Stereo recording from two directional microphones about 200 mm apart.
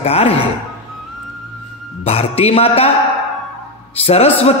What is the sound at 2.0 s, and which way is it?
Speech, 30° left (ahead or behind).